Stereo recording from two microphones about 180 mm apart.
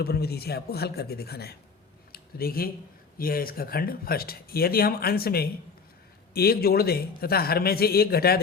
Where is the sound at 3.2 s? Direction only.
55° left (ahead or behind).